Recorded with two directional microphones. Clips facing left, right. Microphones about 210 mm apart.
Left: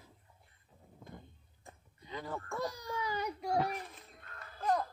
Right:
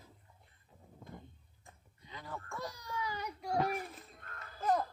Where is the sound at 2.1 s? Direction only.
40° left (ahead or behind).